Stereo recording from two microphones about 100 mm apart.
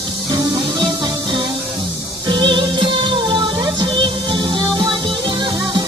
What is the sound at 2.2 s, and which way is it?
Music, 50° right (ahead or behind).